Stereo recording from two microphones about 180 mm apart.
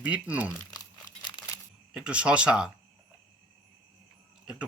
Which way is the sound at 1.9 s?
5° right (ahead or behind).